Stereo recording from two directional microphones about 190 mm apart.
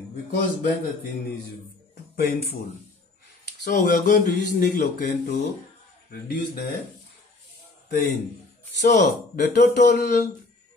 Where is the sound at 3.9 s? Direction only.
45° left (ahead or behind).